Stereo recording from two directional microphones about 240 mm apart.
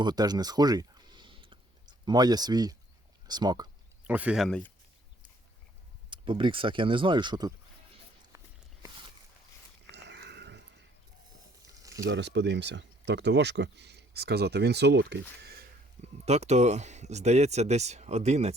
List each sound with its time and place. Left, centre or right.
0.0 s a sound: centre
3.2 s speech: centre
4.0 s speech: centre
6.1 s speech: centre
8.8 s a sound: right
9.9 s pig: right
11.6 s a sound: centre
12.0 s speech: right
16.0 s speech: right